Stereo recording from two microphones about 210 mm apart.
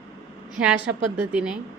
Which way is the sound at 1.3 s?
5° right (ahead or behind).